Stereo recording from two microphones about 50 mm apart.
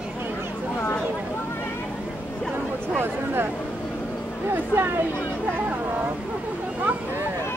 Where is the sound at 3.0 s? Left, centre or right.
Right.